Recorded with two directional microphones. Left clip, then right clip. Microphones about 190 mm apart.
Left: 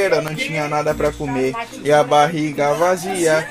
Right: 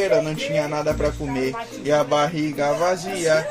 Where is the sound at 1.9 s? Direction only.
35° left (ahead or behind).